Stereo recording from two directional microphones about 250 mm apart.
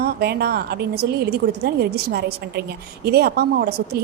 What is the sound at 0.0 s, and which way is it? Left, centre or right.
A woman's voice, right.